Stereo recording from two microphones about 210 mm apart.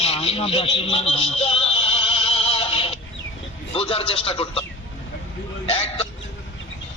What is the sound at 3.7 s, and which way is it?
Speech, 25° left (ahead or behind).